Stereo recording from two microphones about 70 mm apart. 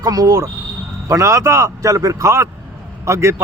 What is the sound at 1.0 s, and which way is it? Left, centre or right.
A man's voice, right.